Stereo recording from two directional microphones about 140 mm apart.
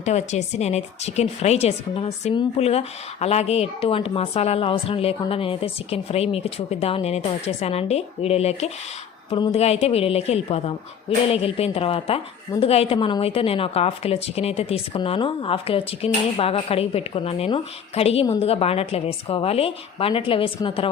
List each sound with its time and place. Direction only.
0.0 s a woman's voice: 55° left (ahead or behind)